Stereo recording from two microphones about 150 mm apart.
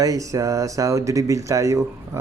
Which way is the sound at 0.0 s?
20° right (ahead or behind).